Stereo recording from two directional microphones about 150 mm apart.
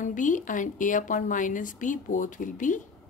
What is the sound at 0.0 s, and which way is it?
Speech, 60° left (ahead or behind).